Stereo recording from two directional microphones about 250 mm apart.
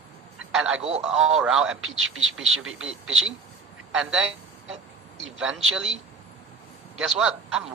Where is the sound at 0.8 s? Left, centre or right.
Right.